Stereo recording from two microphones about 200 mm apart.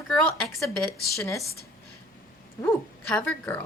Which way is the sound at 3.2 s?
10° left (ahead or behind).